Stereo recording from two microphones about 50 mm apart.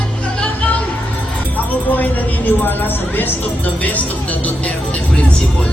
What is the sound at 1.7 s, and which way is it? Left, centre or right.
Speech, left.